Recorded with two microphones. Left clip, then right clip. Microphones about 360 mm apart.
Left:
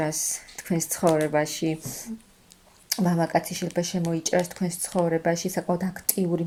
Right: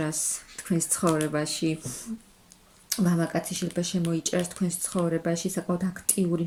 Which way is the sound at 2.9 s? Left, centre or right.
Centre.